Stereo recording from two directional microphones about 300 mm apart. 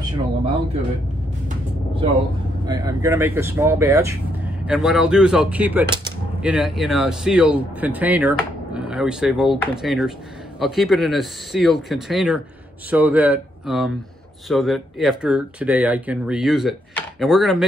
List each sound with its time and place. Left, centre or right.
2.6 s speech: centre